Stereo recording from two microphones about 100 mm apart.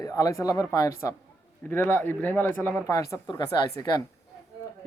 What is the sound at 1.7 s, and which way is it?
Speech, 20° left (ahead or behind).